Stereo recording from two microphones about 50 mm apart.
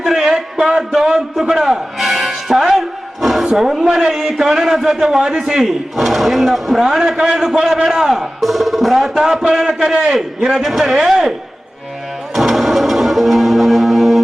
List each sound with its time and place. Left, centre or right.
0.0 s a sound: centre
0.5 s music: centre
3.6 s a man's voice: centre
12.3 s music: centre